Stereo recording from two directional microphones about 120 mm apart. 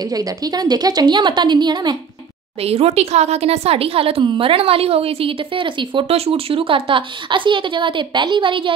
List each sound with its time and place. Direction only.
0.1 s a woman's voice: 30° right (ahead or behind)
2.6 s speech: 55° right (ahead or behind)